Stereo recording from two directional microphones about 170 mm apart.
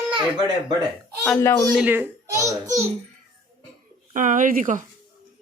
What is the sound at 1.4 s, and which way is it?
Speech, 20° left (ahead or behind).